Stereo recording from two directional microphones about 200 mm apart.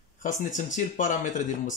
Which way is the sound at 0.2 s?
40° left (ahead or behind).